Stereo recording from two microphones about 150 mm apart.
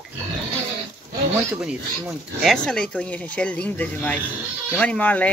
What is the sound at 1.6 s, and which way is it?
Speech, 5° right (ahead or behind).